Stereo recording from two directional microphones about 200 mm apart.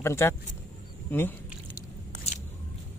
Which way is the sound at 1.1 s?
10° left (ahead or behind).